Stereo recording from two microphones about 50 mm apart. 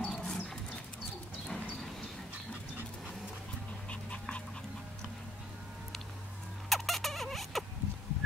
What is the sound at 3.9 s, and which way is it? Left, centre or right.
Dog, left.